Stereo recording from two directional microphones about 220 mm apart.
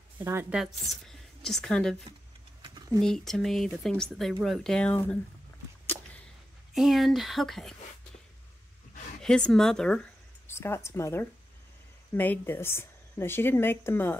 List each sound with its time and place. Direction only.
0.2 s a woman's voice: 10° right (ahead or behind)
2.6 s a sound: 20° right (ahead or behind)
3.0 s speech: centre (ahead or behind)
5.9 s a sound: 10° right (ahead or behind)
6.7 s speech: centre (ahead or behind)
9.2 s speech: 5° left (ahead or behind)